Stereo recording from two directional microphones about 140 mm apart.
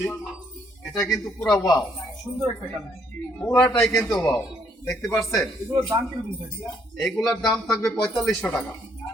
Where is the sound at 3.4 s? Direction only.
5° left (ahead or behind).